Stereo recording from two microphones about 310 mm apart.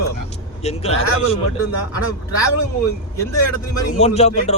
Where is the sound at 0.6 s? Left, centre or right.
Centre.